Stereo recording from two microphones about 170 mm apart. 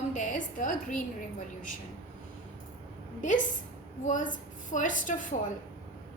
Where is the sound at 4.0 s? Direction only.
50° left (ahead or behind).